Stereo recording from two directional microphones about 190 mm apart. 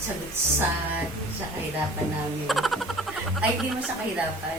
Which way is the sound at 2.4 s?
Centre (ahead or behind).